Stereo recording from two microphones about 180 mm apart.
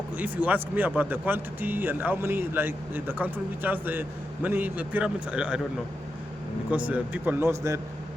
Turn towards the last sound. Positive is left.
turn(degrees=-15)  # may be behind; listen again after turning